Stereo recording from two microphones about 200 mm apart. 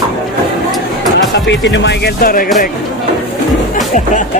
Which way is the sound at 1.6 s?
65° left (ahead or behind).